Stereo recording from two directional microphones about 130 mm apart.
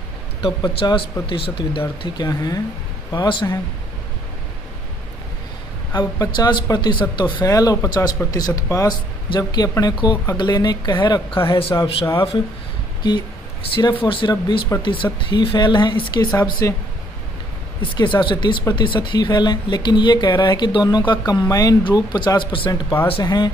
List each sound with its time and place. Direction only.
0.4 s speech: 35° left (ahead or behind)
5.9 s speech: 30° left (ahead or behind)
7.4 s speech: 25° left (ahead or behind)
14.0 s speech: 40° left (ahead or behind)
17.9 s speech: 40° left (ahead or behind)